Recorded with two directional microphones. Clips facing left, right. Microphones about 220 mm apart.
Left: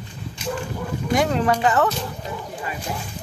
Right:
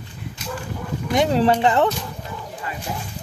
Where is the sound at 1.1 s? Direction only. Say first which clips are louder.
Right 3 dB; 25° right (ahead or behind).